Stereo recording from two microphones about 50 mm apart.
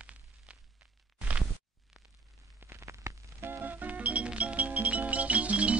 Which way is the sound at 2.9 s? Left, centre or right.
Right.